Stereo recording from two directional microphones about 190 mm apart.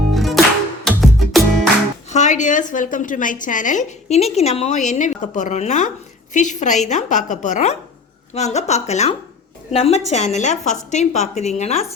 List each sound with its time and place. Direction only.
0.1 s music: centre (ahead or behind)
2.0 s a woman's voice: 40° left (ahead or behind)